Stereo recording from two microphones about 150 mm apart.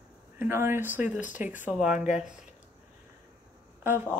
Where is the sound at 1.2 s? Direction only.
55° left (ahead or behind).